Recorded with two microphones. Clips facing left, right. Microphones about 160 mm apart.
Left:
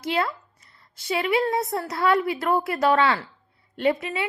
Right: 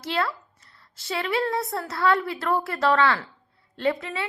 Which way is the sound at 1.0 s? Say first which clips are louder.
Left 3 dB; 20° left (ahead or behind).